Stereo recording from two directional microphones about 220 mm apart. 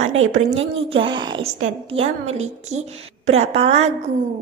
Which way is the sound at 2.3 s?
30° right (ahead or behind).